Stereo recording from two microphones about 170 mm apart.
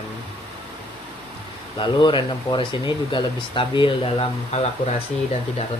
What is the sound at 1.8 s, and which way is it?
Speech, 30° left (ahead or behind).